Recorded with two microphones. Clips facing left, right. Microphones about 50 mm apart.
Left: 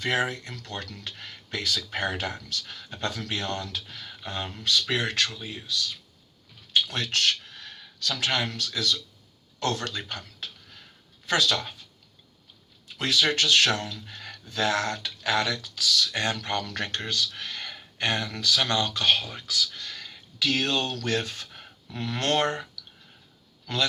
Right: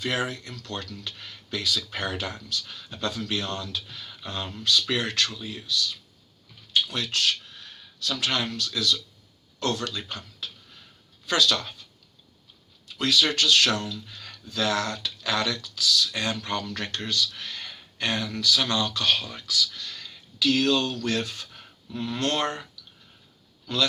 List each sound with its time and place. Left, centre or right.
0.0 s speech: left
6.8 s a sound: left
8.2 s speech: left
11.3 s speech: left
13.0 s speech: left
21.8 s speech: left
23.7 s speech: left